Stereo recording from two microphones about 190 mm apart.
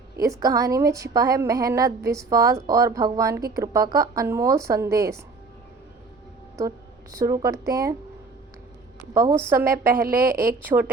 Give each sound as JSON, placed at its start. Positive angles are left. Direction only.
{"t": 0.2, "sound": "a woman's voice", "side_deg": -20}
{"t": 6.6, "sound": "a woman's voice", "side_deg": -15}
{"t": 9.1, "sound": "a woman's voice", "side_deg": -15}
{"t": 10.1, "sound": "a woman's voice", "side_deg": -50}
{"t": 10.6, "sound": "a woman's voice", "side_deg": -10}